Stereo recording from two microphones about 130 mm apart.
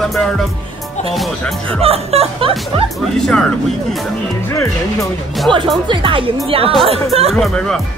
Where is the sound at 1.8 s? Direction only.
50° right (ahead or behind).